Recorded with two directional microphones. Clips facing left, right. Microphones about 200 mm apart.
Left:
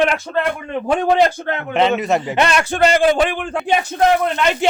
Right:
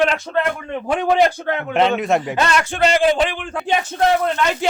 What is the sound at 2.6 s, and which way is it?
Speech, 45° left (ahead or behind).